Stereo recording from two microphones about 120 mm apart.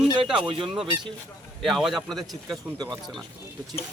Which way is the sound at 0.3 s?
45° right (ahead or behind).